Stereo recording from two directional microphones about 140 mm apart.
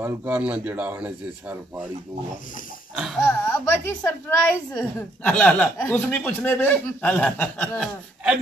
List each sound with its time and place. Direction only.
0.0 s speech: 15° right (ahead or behind)
3.3 s a woman's voice: 15° left (ahead or behind)